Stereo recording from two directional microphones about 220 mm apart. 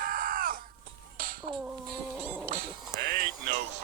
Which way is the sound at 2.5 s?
45° right (ahead or behind).